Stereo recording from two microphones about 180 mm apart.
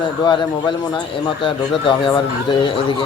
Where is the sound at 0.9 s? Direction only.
30° left (ahead or behind).